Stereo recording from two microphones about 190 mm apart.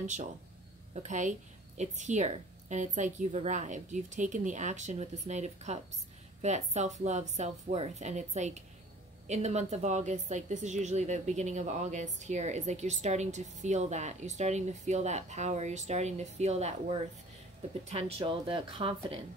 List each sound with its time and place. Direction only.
0.0 s a woman's voice: 40° right (ahead or behind)